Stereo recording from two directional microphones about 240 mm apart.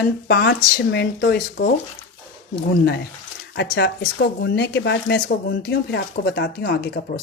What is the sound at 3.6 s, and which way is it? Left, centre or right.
A woman's voice, left.